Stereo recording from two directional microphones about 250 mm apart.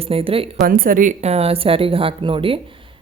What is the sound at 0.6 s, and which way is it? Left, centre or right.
A woman's voice, right.